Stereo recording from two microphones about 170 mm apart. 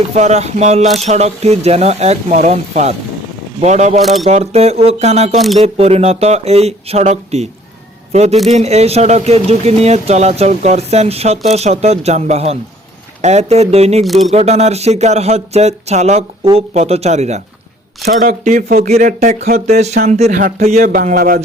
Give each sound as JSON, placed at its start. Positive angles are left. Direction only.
{"t": 0.1, "sound": "speech", "side_deg": -40}
{"t": 4.0, "sound": "speech", "side_deg": 0}
{"t": 4.3, "sound": "speech", "side_deg": -40}
{"t": 14.0, "sound": "speech", "side_deg": 0}
{"t": 14.3, "sound": "speech", "side_deg": -40}
{"t": 18.0, "sound": "speech", "side_deg": -55}